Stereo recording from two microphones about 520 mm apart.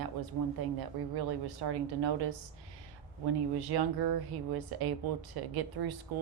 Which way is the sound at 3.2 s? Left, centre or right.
Right.